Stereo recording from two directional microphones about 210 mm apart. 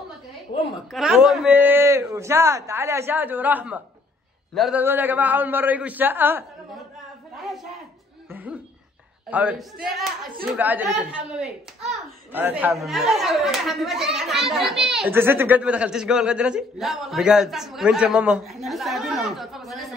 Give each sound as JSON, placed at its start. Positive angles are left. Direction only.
{"t": 0.5, "sound": "a woman's voice", "side_deg": 40}
{"t": 0.9, "sound": "a man's voice", "side_deg": 0}
{"t": 8.3, "sound": "a sound", "side_deg": -10}
{"t": 9.3, "sound": "a child's voice", "side_deg": -5}